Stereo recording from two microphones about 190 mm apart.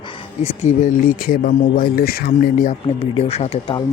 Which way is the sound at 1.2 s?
50° left (ahead or behind).